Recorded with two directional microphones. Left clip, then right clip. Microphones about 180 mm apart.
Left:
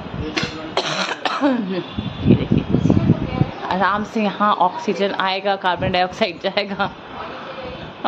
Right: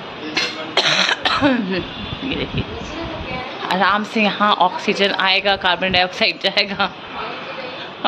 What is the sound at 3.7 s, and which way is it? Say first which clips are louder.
Speech: right 3 dB; 15° left (ahead or behind).